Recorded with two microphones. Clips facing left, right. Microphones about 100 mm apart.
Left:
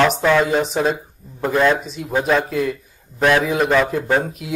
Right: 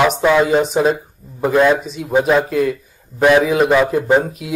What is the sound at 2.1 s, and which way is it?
Speech, 15° right (ahead or behind).